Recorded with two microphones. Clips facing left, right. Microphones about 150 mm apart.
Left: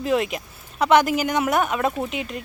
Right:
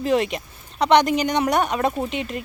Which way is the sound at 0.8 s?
5° left (ahead or behind).